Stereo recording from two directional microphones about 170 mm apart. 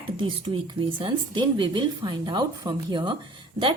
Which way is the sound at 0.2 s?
30° right (ahead or behind).